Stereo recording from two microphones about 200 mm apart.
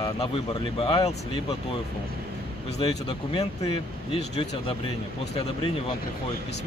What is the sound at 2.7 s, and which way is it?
Speech, 30° left (ahead or behind).